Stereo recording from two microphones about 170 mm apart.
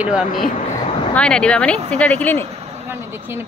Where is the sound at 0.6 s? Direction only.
45° left (ahead or behind).